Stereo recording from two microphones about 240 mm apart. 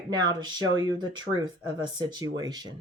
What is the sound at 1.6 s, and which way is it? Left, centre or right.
Speech, centre.